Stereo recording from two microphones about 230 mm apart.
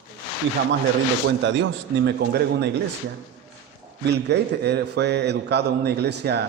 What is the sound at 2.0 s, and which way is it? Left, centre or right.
Speech, right.